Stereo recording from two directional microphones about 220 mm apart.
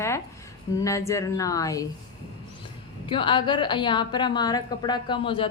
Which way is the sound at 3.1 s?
20° left (ahead or behind).